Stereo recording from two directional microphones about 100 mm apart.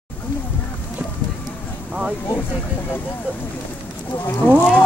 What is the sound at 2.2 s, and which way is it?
Speech, 20° left (ahead or behind).